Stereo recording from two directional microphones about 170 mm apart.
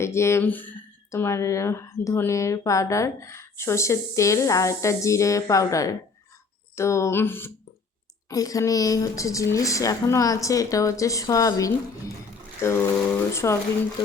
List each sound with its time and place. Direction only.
0.0 s speech: 15° left (ahead or behind)